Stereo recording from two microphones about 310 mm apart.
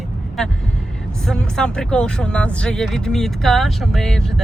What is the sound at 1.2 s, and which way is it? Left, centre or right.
Speech, centre.